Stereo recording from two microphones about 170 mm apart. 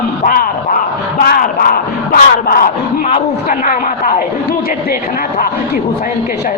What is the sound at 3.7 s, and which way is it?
Speech, 55° left (ahead or behind).